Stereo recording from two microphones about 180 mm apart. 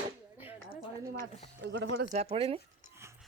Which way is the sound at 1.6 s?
75° right (ahead or behind).